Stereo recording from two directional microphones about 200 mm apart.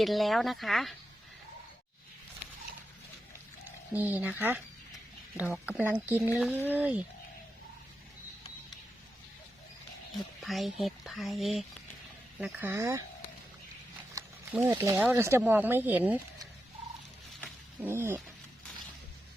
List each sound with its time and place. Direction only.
0.0 s speech: centre (ahead or behind)
3.9 s speech: 10° right (ahead or behind)
10.2 s speech: centre (ahead or behind)
14.2 s speech: 15° right (ahead or behind)
17.8 s speech: 10° right (ahead or behind)